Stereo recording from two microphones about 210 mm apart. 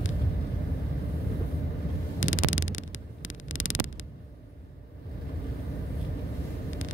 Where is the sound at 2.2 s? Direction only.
70° left (ahead or behind).